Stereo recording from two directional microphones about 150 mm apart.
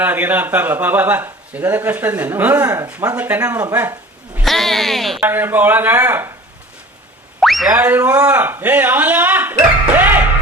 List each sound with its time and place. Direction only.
0.0 s speech: 10° right (ahead or behind)
4.4 s speech: centre (ahead or behind)
5.2 s speech: 15° right (ahead or behind)
7.3 s boing: centre (ahead or behind)
7.8 s speech: 10° right (ahead or behind)